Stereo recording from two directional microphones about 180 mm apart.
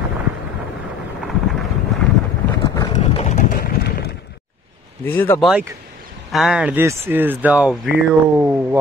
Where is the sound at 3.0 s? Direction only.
35° left (ahead or behind); by 4.2 s 65° left (ahead or behind).